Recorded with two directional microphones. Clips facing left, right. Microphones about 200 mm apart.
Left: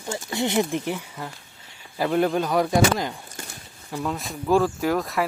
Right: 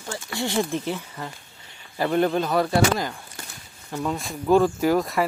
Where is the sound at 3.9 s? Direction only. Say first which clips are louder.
Right 1 dB; centre (ahead or behind).